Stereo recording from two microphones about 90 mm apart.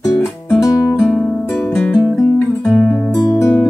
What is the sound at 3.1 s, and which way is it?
Music, 40° left (ahead or behind).